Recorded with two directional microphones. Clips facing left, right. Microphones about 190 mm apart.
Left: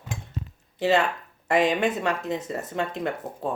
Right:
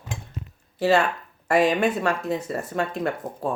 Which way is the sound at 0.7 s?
20° left (ahead or behind).